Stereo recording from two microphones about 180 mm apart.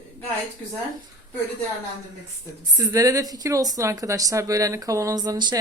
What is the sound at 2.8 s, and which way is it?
A woman's voice, 20° right (ahead or behind).